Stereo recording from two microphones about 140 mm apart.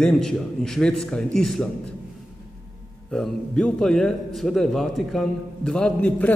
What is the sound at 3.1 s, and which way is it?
A man's voice, 5° left (ahead or behind).